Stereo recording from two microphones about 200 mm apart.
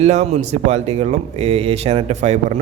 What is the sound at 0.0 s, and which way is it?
A man's voice, 35° right (ahead or behind).